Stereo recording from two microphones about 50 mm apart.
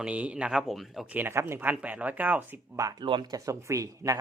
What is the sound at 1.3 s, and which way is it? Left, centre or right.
Speech, right.